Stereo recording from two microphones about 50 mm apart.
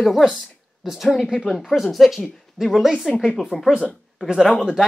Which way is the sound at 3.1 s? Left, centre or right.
Centre.